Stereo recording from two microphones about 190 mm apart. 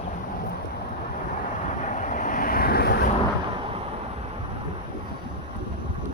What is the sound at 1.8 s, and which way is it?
Vehicle, 40° left (ahead or behind).